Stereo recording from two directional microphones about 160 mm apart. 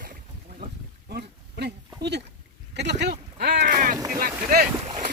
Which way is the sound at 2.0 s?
90° right.